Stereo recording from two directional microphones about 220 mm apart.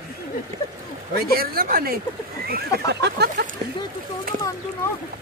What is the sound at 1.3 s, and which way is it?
A woman's voice, 40° right (ahead or behind).